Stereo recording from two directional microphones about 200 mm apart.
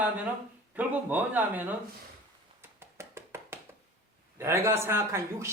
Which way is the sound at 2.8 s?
10° right (ahead or behind).